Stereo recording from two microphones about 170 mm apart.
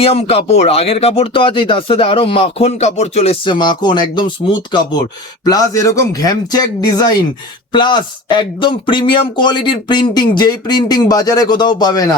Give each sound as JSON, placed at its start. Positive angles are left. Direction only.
{"t": 0.0, "sound": "speech", "side_deg": 35}